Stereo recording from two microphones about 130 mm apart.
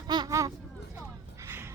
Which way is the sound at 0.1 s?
30° right (ahead or behind).